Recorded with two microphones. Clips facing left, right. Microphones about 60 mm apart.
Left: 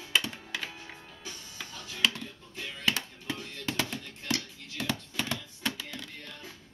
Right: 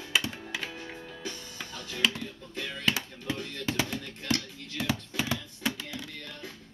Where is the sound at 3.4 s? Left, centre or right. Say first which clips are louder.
Right 5 dB; right.